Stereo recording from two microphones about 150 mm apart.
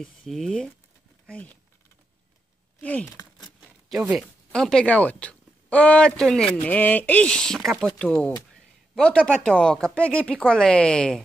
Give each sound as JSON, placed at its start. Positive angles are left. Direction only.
{"t": 0.0, "sound": "speech", "side_deg": 5}
{"t": 2.8, "sound": "speech", "side_deg": 10}
{"t": 3.1, "sound": "a sound", "side_deg": 25}
{"t": 4.5, "sound": "speech", "side_deg": 5}